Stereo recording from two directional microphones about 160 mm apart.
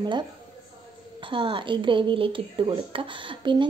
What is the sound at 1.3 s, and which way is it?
Speech, 30° right (ahead or behind).